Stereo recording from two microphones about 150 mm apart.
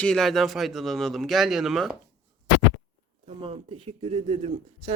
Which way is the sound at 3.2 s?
40° right (ahead or behind).